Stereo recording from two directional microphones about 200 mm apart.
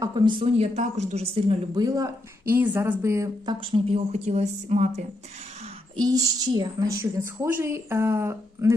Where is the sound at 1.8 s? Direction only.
15° right (ahead or behind); by 5.0 s 35° right (ahead or behind).